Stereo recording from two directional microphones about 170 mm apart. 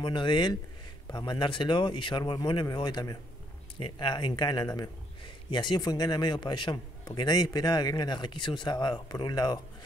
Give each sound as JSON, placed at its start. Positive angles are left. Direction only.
{"t": 0.0, "sound": "a man's voice", "side_deg": 30}